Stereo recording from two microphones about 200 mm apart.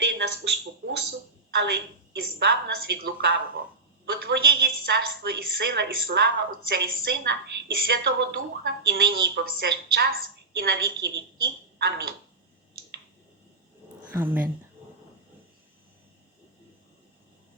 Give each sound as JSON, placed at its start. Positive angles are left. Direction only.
{"t": 0.0, "sound": "a sound", "side_deg": -60}
{"t": 4.1, "sound": "a woman's voice", "side_deg": -50}
{"t": 14.1, "sound": "speech", "side_deg": -10}